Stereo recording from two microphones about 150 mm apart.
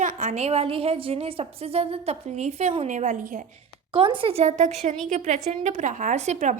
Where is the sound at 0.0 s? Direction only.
60° right (ahead or behind).